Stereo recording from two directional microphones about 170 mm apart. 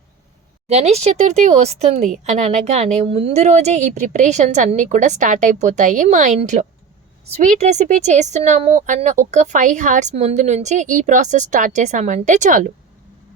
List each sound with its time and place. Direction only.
0.7 s speech: 40° right (ahead or behind)